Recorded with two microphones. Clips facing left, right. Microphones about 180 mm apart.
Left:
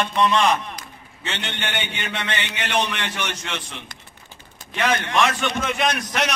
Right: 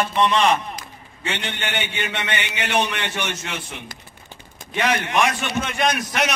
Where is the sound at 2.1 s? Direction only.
20° right (ahead or behind).